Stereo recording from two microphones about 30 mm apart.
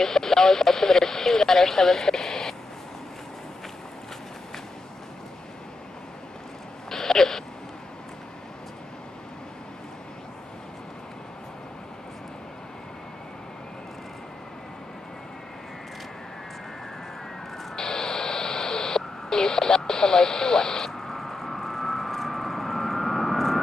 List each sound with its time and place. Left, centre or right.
0.0 s speech: centre
6.9 s a sound: centre
17.7 s radio: centre
21.0 s vehicle: centre